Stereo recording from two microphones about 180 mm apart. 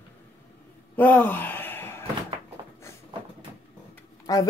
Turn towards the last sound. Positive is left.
turn(degrees=20)  # may be behind; listen again after turning